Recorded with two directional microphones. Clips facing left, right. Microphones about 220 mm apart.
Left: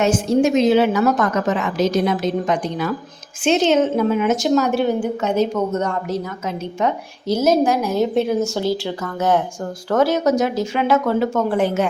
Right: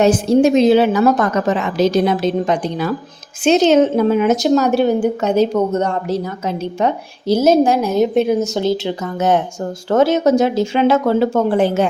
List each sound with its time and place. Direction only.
0.0 s a woman's voice: 35° right (ahead or behind)